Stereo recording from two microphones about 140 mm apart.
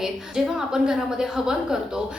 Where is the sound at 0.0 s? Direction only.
5° right (ahead or behind).